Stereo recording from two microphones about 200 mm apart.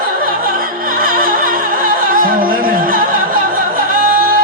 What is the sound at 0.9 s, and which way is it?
Music, 45° right (ahead or behind).